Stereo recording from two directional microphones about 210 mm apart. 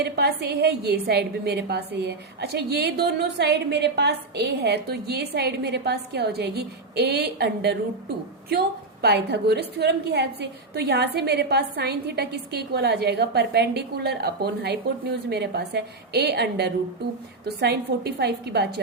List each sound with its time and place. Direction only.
0.0 s a woman's voice: 50° right (ahead or behind)